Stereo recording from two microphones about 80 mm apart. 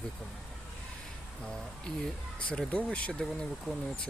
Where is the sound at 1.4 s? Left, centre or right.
Centre.